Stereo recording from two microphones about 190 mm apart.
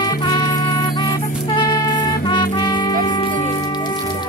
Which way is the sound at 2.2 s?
25° left (ahead or behind).